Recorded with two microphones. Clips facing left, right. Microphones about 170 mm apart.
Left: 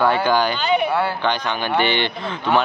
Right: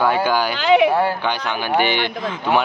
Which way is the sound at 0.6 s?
90° right.